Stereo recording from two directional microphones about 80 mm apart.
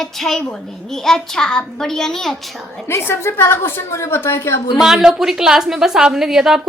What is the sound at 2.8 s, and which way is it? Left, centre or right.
A woman's voice, left.